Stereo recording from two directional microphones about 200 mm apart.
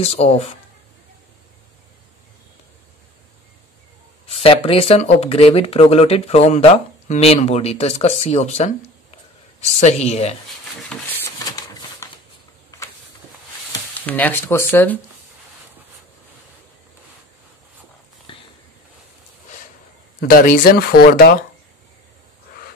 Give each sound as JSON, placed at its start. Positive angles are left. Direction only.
{"t": 0.0, "sound": "speech", "side_deg": 30}
{"t": 4.3, "sound": "speech", "side_deg": 30}
{"t": 10.8, "sound": "a sound", "side_deg": 5}
{"t": 14.0, "sound": "speech", "side_deg": 10}
{"t": 18.3, "sound": "a sound", "side_deg": 25}
{"t": 20.2, "sound": "speech", "side_deg": 45}